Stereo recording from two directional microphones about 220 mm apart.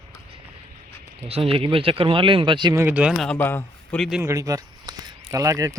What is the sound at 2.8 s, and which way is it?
Speech, 5° right (ahead or behind).